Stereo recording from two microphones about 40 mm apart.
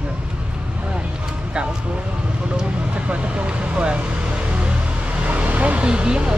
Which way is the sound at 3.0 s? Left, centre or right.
Right.